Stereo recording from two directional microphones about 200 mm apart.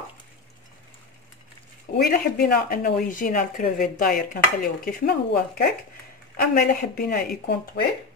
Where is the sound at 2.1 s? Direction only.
50° left (ahead or behind).